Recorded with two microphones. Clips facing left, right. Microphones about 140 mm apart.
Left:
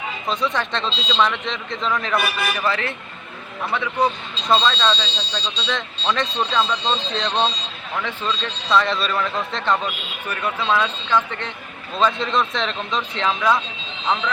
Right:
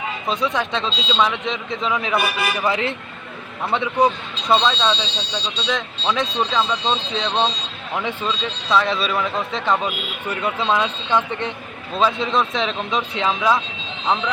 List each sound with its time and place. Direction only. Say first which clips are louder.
0.3 s speech: right 1 dB; 5° right (ahead or behind)
2.6 s speech: right 2 dB; 20° right (ahead or behind)
4.4 s speech: right 1 dB; 10° right (ahead or behind)
7.9 s speech: right 2 dB; 15° right (ahead or behind)
10.2 s speech: right 1 dB; 20° right (ahead or behind)
11.9 s speech: right 1 dB; 5° right (ahead or behind)